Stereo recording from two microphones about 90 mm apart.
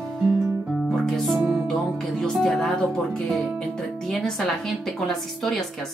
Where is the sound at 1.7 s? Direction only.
5° left (ahead or behind).